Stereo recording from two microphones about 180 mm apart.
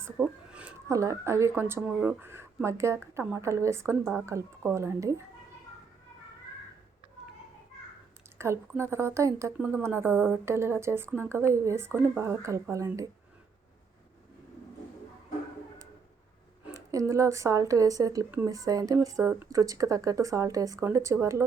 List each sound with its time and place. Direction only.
0.0 s speech: 10° right (ahead or behind)
8.4 s speech: 15° right (ahead or behind)
16.9 s speech: 15° right (ahead or behind)